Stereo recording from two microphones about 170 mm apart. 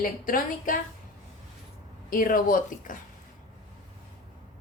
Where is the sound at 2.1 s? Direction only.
55° left (ahead or behind).